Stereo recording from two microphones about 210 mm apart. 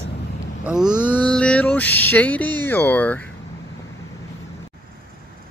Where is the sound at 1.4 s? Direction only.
5° left (ahead or behind).